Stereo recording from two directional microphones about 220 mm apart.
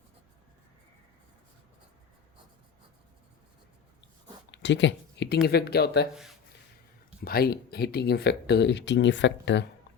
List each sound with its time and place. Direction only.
4.5 s speech: 55° left (ahead or behind)
7.3 s speech: 45° left (ahead or behind)